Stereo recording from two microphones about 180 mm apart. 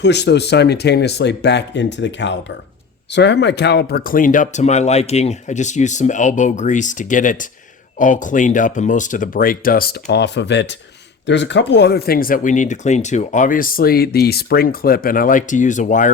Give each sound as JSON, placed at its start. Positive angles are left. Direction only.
{"t": 0.0, "sound": "speech", "side_deg": 70}